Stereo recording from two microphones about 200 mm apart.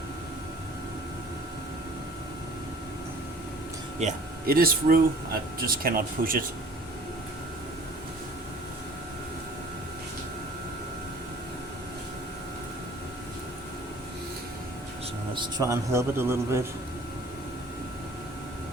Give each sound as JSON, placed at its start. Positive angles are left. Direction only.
{"t": 4.0, "sound": "speech", "side_deg": -45}
{"t": 15.4, "sound": "a man's voice", "side_deg": -20}